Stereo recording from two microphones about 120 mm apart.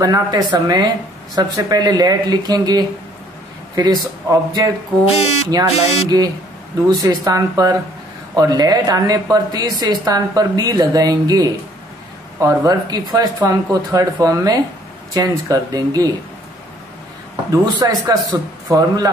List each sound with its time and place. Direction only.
0.0 s a woman's voice: 35° right (ahead or behind)
5.0 s speech: 60° left (ahead or behind)
6.0 s a woman's voice: 30° right (ahead or behind)
17.5 s a woman's voice: 30° right (ahead or behind)